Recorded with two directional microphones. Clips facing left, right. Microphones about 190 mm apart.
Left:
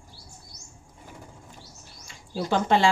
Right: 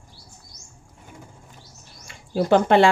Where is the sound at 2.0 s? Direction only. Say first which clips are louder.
Right 7 dB; 55° right (ahead or behind).